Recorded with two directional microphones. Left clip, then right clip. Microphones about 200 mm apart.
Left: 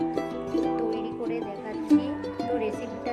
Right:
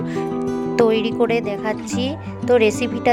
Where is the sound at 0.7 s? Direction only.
60° right (ahead or behind).